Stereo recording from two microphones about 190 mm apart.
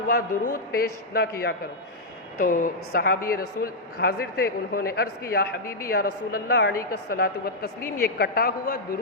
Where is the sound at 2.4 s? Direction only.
45° left (ahead or behind).